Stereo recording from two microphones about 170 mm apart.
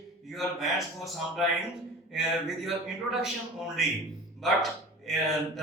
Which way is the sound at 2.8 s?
5° right (ahead or behind).